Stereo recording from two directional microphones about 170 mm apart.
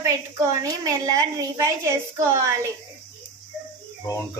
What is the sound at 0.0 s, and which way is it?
A woman's voice, 20° right (ahead or behind).